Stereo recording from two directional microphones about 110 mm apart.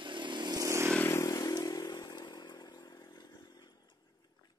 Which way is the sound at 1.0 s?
25° left (ahead or behind).